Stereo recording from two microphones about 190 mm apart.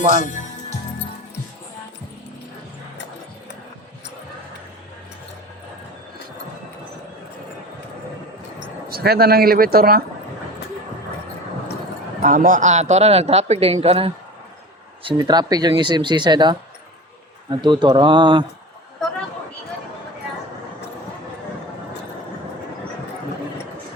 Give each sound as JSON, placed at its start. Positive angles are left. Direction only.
{"t": 0.2, "sound": "music", "side_deg": 40}
{"t": 8.9, "sound": "speech", "side_deg": -55}
{"t": 12.2, "sound": "speech", "side_deg": -45}
{"t": 17.6, "sound": "speech", "side_deg": -25}